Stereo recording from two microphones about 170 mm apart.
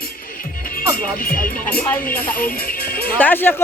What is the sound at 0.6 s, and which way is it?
Music, 55° left (ahead or behind).